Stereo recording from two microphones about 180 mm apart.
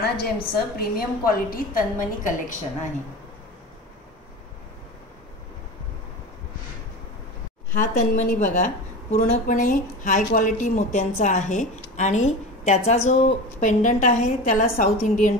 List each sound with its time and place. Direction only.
0.0 s a woman's voice: 60° left (ahead or behind)
7.7 s a woman's voice: 45° left (ahead or behind)